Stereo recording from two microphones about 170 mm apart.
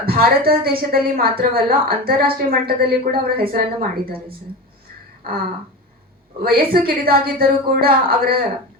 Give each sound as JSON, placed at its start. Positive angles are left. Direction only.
{"t": 0.0, "sound": "a woman's voice", "side_deg": -60}
{"t": 6.4, "sound": "a woman's voice", "side_deg": -60}